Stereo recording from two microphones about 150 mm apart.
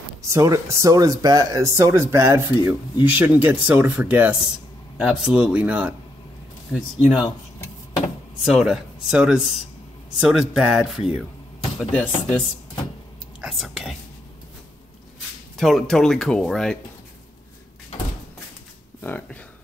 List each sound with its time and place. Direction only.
0.3 s speech: 20° right (ahead or behind)
7.2 s a sound: 25° left (ahead or behind)
8.5 s speech: centre (ahead or behind)
13.4 s speech: centre (ahead or behind)
15.5 s speech: centre (ahead or behind)
18.9 s speech: 15° left (ahead or behind)